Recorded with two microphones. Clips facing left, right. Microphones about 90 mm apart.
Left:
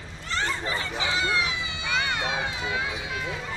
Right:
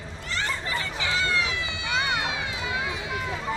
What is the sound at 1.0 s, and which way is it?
Run, 20° left (ahead or behind).